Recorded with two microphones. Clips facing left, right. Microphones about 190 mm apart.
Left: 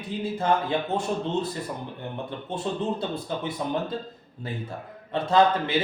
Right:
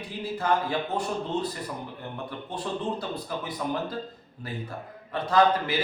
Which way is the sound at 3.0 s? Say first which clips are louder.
Left 3 dB; 25° left (ahead or behind).